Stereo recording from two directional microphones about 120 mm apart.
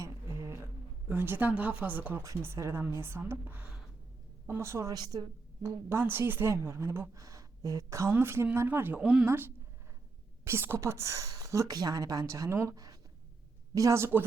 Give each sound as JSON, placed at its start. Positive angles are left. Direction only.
{"t": 1.0, "sound": "a woman's voice", "side_deg": -15}
{"t": 5.6, "sound": "a woman's voice", "side_deg": -20}